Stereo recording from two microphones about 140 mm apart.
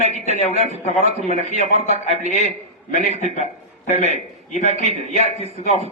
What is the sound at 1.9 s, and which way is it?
Speech, 50° right (ahead or behind).